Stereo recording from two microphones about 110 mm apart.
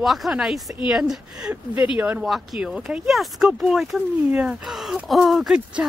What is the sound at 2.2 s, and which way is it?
Speech, centre (ahead or behind).